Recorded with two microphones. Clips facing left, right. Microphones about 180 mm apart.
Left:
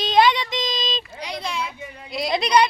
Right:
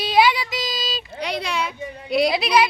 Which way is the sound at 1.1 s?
65° right (ahead or behind).